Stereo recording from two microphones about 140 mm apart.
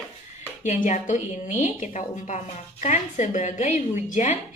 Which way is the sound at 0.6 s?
60° left (ahead or behind).